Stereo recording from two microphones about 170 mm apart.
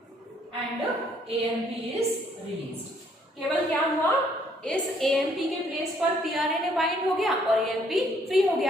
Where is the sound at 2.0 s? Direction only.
35° right (ahead or behind).